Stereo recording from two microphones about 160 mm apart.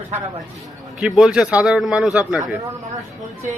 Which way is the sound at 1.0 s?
5° right (ahead or behind).